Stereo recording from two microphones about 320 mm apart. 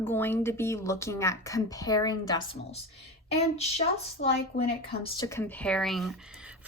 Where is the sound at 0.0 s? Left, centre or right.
Centre.